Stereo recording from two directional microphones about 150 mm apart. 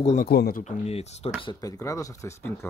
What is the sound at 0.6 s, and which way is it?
Speech, 45° left (ahead or behind).